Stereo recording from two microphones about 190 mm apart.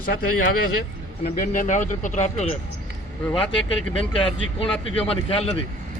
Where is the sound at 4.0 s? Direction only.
30° left (ahead or behind).